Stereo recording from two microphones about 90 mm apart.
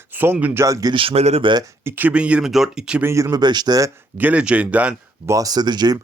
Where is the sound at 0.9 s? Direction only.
75° right (ahead or behind).